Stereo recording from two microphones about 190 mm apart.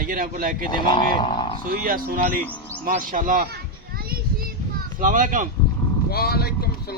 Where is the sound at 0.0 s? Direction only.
50° right (ahead or behind).